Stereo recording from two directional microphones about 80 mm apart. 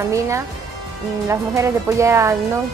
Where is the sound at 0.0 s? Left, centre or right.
Right.